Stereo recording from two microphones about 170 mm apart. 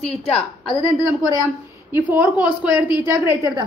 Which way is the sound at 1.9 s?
10° right (ahead or behind).